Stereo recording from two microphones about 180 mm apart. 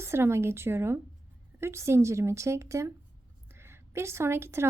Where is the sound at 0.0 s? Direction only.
15° right (ahead or behind).